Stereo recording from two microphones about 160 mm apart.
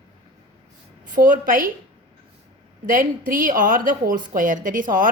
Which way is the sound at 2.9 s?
60° right (ahead or behind).